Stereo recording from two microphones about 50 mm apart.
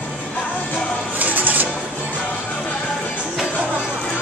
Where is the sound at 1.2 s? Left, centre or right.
Right.